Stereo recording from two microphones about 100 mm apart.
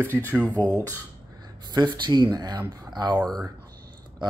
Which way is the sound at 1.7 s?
50° right (ahead or behind).